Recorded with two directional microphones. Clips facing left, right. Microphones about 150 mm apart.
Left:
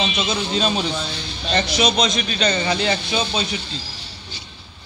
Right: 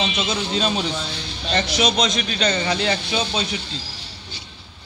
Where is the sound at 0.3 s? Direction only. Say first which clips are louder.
Left 2 dB; 25° left (ahead or behind).